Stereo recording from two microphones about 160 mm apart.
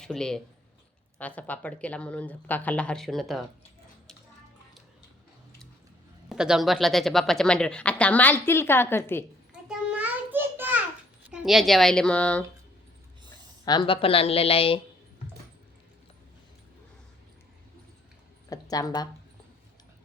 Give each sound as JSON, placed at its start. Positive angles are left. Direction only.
{"t": 0.0, "sound": "a woman's voice", "side_deg": 5}
{"t": 6.2, "sound": "speech", "side_deg": -5}
{"t": 9.5, "sound": "a sound", "side_deg": -5}
{"t": 11.3, "sound": "speech", "side_deg": -5}
{"t": 13.7, "sound": "a woman's voice", "side_deg": 30}
{"t": 18.4, "sound": "a sound", "side_deg": 20}